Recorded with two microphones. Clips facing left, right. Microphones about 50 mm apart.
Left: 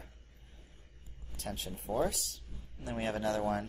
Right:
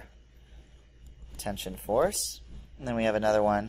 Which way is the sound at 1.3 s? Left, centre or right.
Right.